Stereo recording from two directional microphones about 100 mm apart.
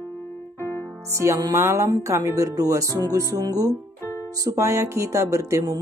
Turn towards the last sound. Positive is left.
turn(degrees=-30)  # may be behind; listen again after turning